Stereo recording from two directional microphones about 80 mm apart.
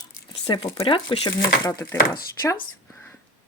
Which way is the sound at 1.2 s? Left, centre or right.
Left.